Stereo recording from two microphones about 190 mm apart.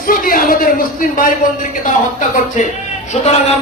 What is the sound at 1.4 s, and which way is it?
A man's voice, 45° left (ahead or behind).